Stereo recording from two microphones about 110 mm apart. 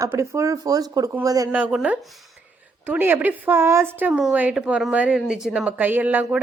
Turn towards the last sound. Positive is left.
turn(degrees=-15)  # may be behind; listen again after turning